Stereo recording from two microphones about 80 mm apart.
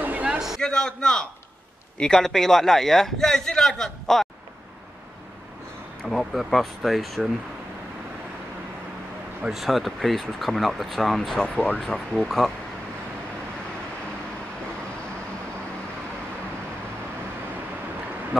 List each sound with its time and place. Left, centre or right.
0.0 s a sound: centre
0.6 s a man's voice: centre
6.0 s a man's voice: centre
9.5 s a man's voice: centre
11.4 s a man's voice: centre
18.3 s speech: centre